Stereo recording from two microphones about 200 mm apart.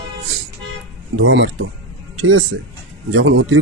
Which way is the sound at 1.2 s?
65° right (ahead or behind).